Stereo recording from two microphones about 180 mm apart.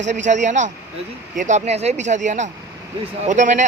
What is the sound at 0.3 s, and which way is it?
Speech, 40° right (ahead or behind).